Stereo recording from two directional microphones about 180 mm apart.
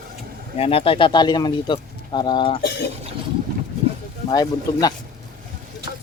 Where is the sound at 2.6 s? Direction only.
65° left (ahead or behind).